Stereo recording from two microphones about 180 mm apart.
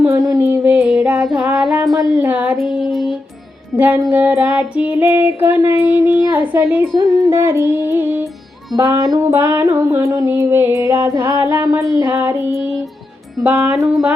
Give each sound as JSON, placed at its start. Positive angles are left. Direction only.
{"t": 0.0, "sound": "music", "side_deg": -15}
{"t": 2.1, "sound": "child singing", "side_deg": -10}
{"t": 6.9, "sound": "music", "side_deg": -15}
{"t": 8.7, "sound": "child singing", "side_deg": -20}